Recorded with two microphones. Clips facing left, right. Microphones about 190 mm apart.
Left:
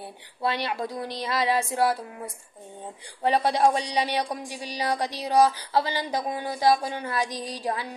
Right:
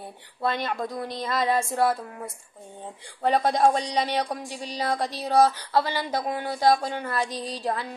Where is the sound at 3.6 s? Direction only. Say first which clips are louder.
Right 1 dB; 10° left (ahead or behind).